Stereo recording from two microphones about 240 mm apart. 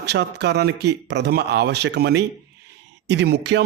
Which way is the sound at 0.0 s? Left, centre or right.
Right.